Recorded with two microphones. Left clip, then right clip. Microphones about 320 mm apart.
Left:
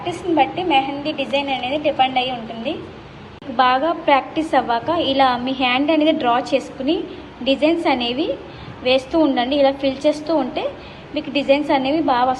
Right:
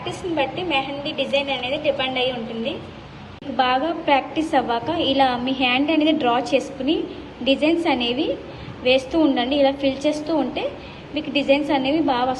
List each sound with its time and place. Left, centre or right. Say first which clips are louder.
0.0 s a woman's voice: left 5 dB; centre
1.0 s a woman's voice: left 1 dB; right
3.6 s a woman's voice: left 4 dB; centre